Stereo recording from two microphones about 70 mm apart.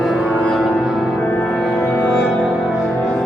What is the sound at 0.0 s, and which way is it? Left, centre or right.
Music, centre.